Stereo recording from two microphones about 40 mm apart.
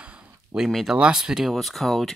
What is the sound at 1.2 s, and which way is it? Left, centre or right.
Speech, centre.